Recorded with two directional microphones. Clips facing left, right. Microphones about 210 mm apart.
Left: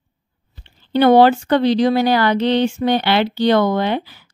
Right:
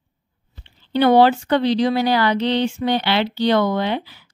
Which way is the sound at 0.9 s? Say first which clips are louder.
Left 3 dB; 50° left (ahead or behind).